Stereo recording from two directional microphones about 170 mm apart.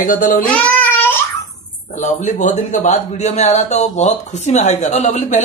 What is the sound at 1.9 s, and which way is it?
A man's voice, 45° left (ahead or behind).